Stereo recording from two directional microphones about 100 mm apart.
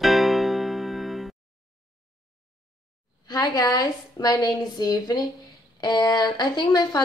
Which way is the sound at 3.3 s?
40° left (ahead or behind).